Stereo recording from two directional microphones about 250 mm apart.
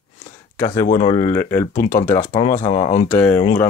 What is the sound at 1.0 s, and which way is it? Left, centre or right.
Speech, left.